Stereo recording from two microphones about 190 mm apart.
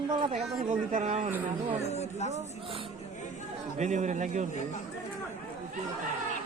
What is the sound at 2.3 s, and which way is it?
Speech, 30° right (ahead or behind).